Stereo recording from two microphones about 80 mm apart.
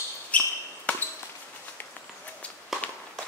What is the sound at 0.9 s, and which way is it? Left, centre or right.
Basketball bounce, centre.